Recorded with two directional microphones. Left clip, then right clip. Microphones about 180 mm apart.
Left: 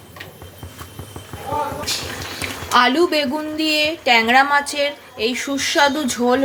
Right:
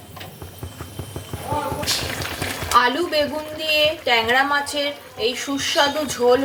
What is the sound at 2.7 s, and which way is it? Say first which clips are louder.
A woman's voice: left 3 dB; 40° left (ahead or behind).